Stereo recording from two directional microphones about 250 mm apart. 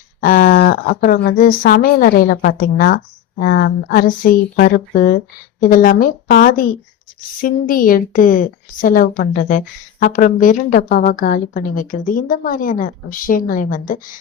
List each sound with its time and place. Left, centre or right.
0.2 s a woman's voice: left